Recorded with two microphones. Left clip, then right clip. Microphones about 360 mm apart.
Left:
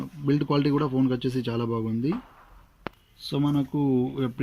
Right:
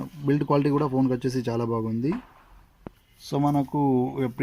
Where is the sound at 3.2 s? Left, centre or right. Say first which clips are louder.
Right 2 dB; centre.